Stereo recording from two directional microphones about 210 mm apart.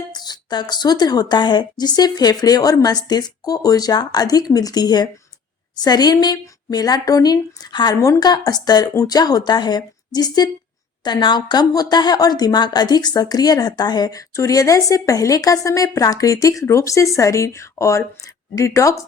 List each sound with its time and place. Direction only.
0.1 s a woman's voice: 20° left (ahead or behind)